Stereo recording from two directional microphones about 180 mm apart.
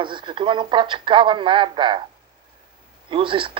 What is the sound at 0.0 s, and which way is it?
Speech, 25° right (ahead or behind).